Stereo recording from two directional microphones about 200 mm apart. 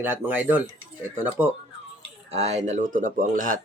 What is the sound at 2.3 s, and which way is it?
Speech, 35° right (ahead or behind).